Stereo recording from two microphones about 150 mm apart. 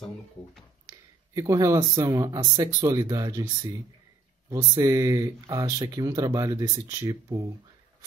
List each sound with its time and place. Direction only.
0.8 s speech: 25° right (ahead or behind)
4.6 s speech: 20° right (ahead or behind)